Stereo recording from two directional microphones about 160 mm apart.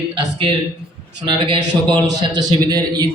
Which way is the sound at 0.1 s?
30° right (ahead or behind).